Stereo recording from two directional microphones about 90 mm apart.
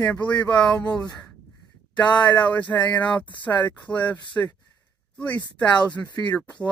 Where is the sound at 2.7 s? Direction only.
30° left (ahead or behind).